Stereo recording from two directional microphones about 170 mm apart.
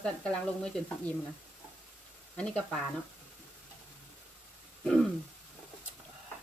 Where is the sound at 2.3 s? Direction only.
5° left (ahead or behind).